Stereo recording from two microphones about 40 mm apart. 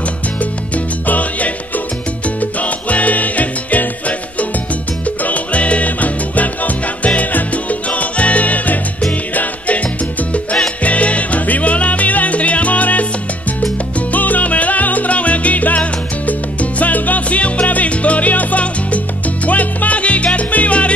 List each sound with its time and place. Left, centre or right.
1.0 s salsa music: left
2.2 s music: left
5.0 s music: left
7.2 s salsa music: left
9.3 s music: left
10.8 s salsa music: left
14.1 s salsa music: left